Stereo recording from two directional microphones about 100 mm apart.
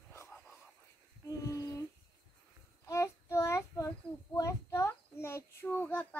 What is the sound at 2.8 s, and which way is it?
Child singing, 30° left (ahead or behind).